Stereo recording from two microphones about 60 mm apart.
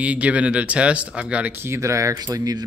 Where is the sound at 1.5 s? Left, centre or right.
Right.